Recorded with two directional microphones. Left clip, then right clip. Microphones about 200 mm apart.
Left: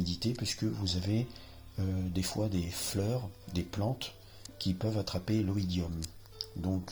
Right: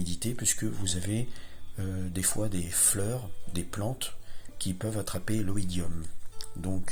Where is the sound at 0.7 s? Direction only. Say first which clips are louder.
Right 1 dB; 25° right (ahead or behind).